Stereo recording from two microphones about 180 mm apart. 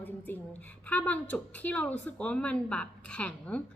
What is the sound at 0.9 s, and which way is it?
A woman's voice, 10° left (ahead or behind).